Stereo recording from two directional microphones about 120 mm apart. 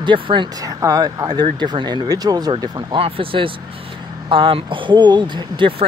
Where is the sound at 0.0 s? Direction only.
40° right (ahead or behind).